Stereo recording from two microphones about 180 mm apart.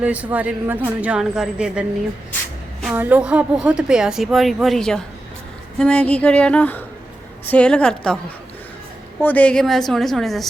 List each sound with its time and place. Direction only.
0.0 s a woman's voice: 10° right (ahead or behind)
2.8 s a woman's voice: 10° right (ahead or behind)
5.8 s a sound: 5° left (ahead or behind)
7.4 s a woman's voice: 5° left (ahead or behind)
9.2 s a woman's voice: 10° left (ahead or behind)